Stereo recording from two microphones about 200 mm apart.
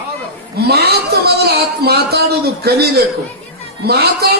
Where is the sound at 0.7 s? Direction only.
55° right (ahead or behind).